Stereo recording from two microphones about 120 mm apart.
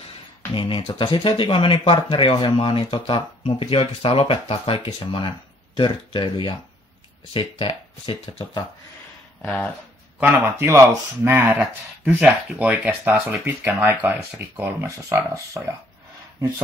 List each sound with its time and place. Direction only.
0.6 s speech: 45° left (ahead or behind)
10.3 s speech: 25° right (ahead or behind)
13.3 s speech: 20° right (ahead or behind)